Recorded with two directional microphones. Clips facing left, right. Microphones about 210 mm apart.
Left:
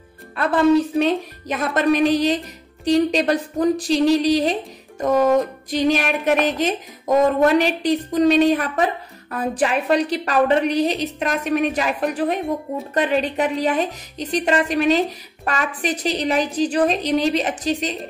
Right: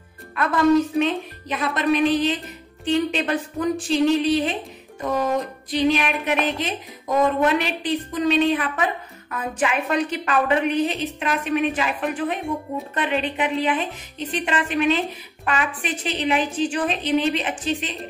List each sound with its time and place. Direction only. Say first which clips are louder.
0.4 s speech: left 2 dB; 30° left (ahead or behind)
5.0 s music: left 6 dB; 45° left (ahead or behind)
6.2 s speech: left 5 dB; 45° left (ahead or behind)